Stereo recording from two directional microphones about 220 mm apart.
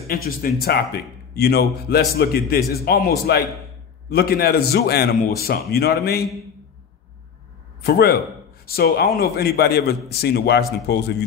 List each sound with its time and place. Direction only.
0.7 s a man's voice: 45° left (ahead or behind)
7.8 s a man's voice: 45° left (ahead or behind)